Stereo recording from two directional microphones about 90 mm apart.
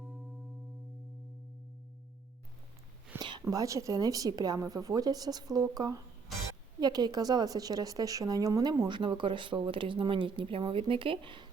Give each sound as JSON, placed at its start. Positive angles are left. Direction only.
{"t": 3.2, "sound": "a sound", "side_deg": -60}
{"t": 3.5, "sound": "speech", "side_deg": -40}
{"t": 8.9, "sound": "speech", "side_deg": -60}